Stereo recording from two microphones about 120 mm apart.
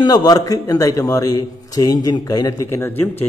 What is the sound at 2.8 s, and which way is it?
Speech, 15° left (ahead or behind).